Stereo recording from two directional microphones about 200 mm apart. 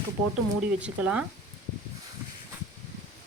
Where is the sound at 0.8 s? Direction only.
5° right (ahead or behind).